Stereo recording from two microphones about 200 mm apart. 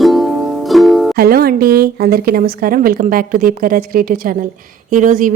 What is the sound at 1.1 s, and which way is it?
A woman's voice, 50° right (ahead or behind).